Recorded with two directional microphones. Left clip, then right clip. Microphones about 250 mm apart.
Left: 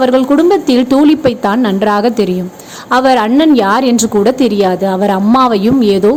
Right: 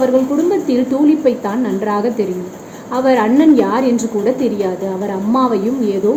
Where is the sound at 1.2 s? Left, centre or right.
Left.